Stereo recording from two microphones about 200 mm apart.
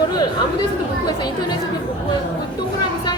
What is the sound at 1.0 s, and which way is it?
Speech, 20° left (ahead or behind).